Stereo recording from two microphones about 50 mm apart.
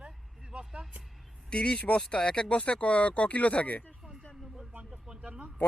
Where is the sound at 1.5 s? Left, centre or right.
Centre.